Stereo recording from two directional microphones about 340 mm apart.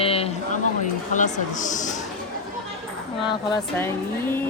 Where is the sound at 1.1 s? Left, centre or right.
Left.